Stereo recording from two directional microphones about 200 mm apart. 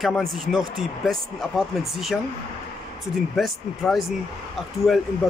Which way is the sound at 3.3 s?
Centre (ahead or behind).